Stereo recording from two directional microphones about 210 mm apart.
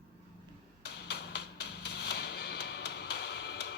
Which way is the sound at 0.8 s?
55° left (ahead or behind).